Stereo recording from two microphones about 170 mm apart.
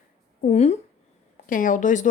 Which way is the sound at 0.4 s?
40° left (ahead or behind).